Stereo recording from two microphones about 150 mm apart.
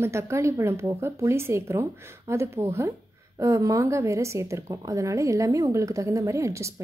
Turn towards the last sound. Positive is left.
turn(degrees=-20)  # may be behind; listen again after turning